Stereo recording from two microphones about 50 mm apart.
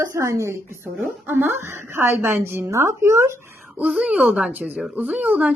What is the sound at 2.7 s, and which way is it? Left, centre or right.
Speech, right.